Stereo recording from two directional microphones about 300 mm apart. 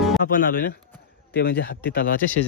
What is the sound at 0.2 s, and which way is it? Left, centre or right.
Speech, left.